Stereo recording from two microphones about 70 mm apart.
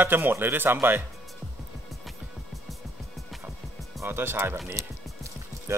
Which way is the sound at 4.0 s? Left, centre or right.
Right.